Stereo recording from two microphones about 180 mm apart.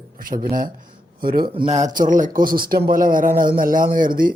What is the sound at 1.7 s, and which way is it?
Speech, 45° right (ahead or behind).